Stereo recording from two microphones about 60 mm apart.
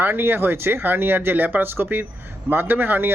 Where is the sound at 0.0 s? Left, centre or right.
Right.